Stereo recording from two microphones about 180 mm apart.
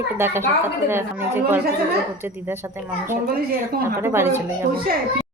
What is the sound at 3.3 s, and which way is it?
Speech, 55° right (ahead or behind).